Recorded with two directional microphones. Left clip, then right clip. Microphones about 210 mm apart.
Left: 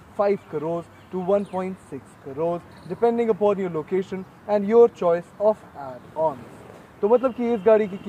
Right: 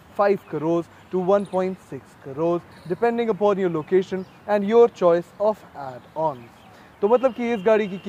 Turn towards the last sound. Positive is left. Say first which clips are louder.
# left 1 dB
turn(degrees=-50)  # may be behind; listen again after turning